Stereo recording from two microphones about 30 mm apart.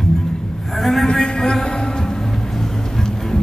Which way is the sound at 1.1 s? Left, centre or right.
Left.